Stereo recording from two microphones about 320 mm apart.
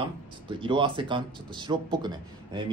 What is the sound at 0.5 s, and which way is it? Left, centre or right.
Speech, centre.